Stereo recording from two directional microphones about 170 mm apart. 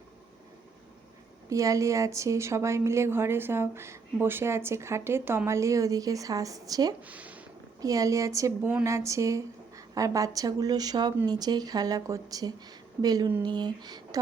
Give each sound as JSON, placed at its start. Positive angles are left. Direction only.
{"t": 1.5, "sound": "a woman's voice", "side_deg": -20}
{"t": 7.0, "sound": "speech", "side_deg": -10}
{"t": 7.8, "sound": "speech", "side_deg": -20}